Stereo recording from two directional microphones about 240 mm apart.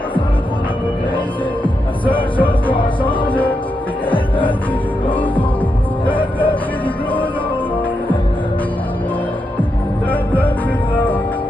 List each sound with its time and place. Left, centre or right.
2.1 s music: centre
2.7 s music: left
6.1 s music: centre
10.1 s music: centre